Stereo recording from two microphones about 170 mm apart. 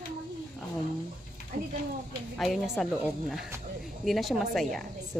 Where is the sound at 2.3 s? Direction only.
Centre (ahead or behind).